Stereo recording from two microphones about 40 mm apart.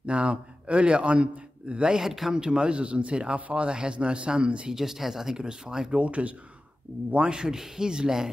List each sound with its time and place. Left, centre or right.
0.0 s a man's voice: right
3.3 s speech: right
3.6 s speech: right
4.7 s speech: centre
5.9 s speech: right; by 8.3 s centre